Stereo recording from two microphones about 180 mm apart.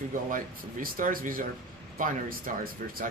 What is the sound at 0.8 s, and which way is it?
Speech, 50° right (ahead or behind).